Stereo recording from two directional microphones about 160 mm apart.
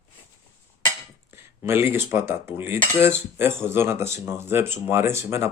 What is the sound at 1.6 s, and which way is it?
Speech, 15° right (ahead or behind).